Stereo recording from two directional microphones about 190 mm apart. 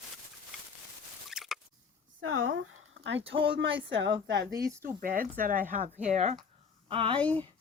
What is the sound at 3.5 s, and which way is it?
Speech, 70° right (ahead or behind).